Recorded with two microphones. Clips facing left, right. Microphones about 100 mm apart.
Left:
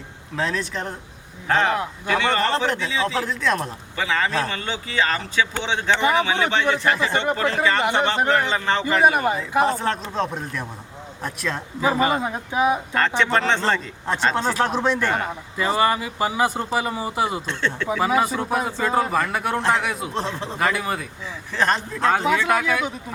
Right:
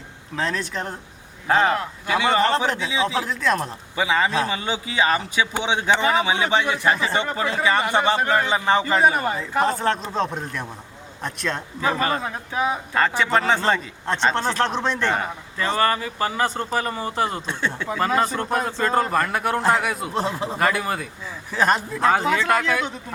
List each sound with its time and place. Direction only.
0.3 s speech: centre (ahead or behind)
3.9 s speech: 15° right (ahead or behind)
9.0 s speech: 15° left (ahead or behind)
9.5 s speech: 5° left (ahead or behind)
11.8 s speech: 15° left (ahead or behind)
12.9 s speech: 5° right (ahead or behind)
14.3 s speech: 5° left (ahead or behind)
17.4 s speech: 10° right (ahead or behind)
17.8 s speech: 10° left (ahead or behind)